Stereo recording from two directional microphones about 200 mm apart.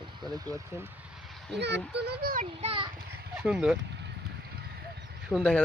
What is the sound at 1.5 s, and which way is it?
Speech, 60° right (ahead or behind).